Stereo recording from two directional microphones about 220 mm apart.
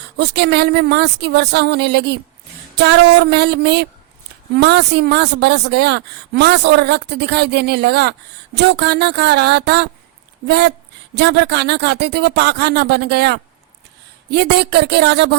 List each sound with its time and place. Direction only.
0.2 s speech: 50° right (ahead or behind)